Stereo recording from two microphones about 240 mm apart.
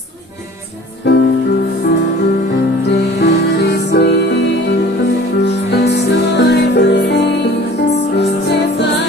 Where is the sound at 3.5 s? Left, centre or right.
Left.